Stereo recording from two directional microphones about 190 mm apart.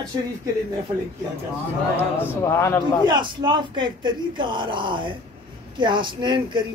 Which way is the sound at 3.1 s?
25° right (ahead or behind).